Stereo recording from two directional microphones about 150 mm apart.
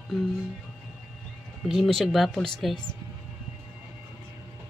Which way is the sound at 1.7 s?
Centre (ahead or behind).